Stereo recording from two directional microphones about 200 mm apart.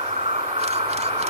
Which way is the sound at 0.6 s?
30° right (ahead or behind).